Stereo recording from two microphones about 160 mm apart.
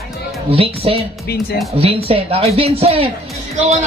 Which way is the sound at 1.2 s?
75° left (ahead or behind).